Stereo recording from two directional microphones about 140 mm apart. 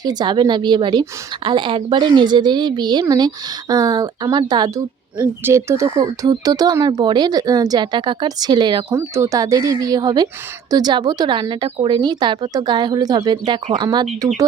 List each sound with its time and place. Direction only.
0.0 s a woman's voice: 30° right (ahead or behind)
5.1 s speech: 15° right (ahead or behind); by 8.8 s 30° right (ahead or behind)
8.9 s a woman's voice: 20° right (ahead or behind)